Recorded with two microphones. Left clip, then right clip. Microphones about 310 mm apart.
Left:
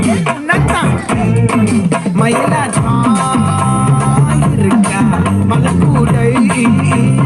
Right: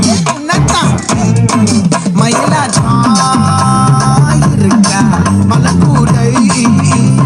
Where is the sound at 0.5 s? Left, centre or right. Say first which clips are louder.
Right 2 dB; centre.